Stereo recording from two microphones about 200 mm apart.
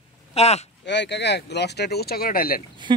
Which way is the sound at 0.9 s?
60° left (ahead or behind).